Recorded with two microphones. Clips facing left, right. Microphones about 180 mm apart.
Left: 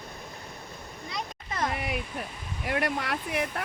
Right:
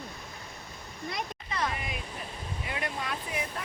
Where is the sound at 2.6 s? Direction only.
75° left (ahead or behind).